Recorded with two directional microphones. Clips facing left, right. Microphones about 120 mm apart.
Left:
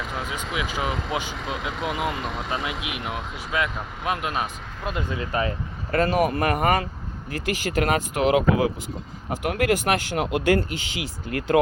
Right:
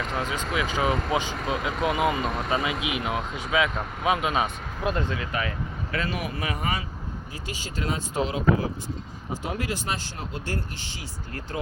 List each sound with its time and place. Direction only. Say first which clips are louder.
0.0 s speech: right 2 dB; 5° left (ahead or behind)
5.1 s speech: left 4 dB; 30° left (ahead or behind)
6.0 s speech: left 10 dB; 45° left (ahead or behind)
7.4 s speech: left 8 dB; 70° left (ahead or behind)
9.3 s speech: left 8 dB; 60° left (ahead or behind)
11.3 s speech: left 14 dB; 90° left